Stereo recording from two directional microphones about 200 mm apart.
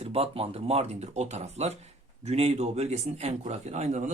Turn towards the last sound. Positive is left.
turn(degrees=-35)  # may be behind; listen again after turning